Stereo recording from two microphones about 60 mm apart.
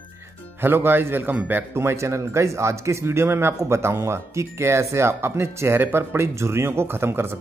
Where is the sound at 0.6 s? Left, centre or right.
Right.